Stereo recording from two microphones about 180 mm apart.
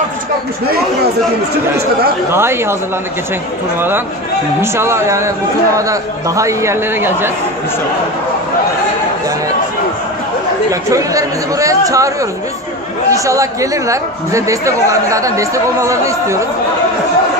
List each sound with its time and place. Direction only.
2.3 s speech: 15° right (ahead or behind)
4.6 s speech: 15° right (ahead or behind)
10.7 s speech: 20° right (ahead or behind)